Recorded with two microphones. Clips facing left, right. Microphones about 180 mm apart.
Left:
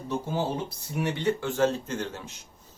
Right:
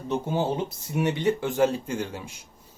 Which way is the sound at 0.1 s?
20° right (ahead or behind).